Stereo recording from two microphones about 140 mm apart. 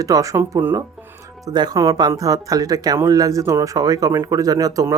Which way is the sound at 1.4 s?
30° right (ahead or behind).